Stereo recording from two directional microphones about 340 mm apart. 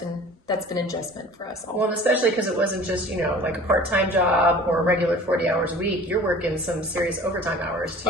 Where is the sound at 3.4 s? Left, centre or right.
Centre.